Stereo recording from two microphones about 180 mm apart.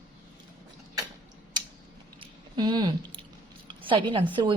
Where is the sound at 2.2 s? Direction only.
25° right (ahead or behind).